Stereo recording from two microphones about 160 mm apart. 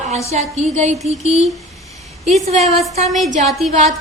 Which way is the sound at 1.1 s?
40° right (ahead or behind).